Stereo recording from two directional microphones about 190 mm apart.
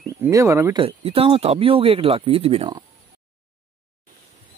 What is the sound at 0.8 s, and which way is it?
Speech, 30° right (ahead or behind).